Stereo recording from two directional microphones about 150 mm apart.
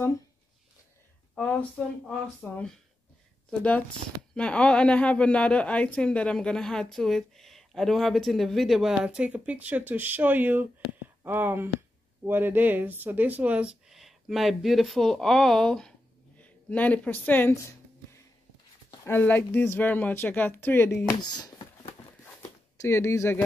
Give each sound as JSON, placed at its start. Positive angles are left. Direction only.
{"t": 1.3, "sound": "a sound", "side_deg": 5}
{"t": 2.0, "sound": "speech", "side_deg": 5}
{"t": 19.0, "sound": "speech", "side_deg": 15}
{"t": 21.2, "sound": "speech", "side_deg": 30}
{"t": 22.8, "sound": "speech", "side_deg": 15}